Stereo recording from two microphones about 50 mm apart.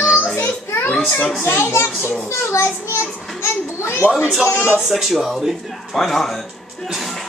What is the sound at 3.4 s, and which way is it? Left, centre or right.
Children playing, left.